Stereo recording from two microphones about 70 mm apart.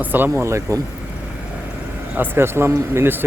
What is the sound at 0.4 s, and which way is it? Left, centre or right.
Speech, right.